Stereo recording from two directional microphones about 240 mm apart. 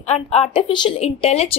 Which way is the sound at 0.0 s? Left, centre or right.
Left.